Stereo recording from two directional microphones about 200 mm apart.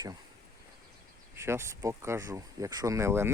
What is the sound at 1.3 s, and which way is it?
Speech, 10° right (ahead or behind).